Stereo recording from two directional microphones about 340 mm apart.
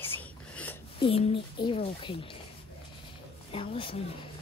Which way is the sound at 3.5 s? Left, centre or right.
Centre.